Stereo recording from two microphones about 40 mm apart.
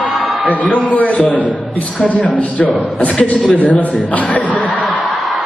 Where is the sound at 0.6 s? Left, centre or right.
Left.